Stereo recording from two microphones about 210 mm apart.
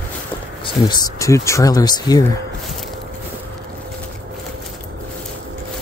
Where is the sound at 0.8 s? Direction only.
20° left (ahead or behind).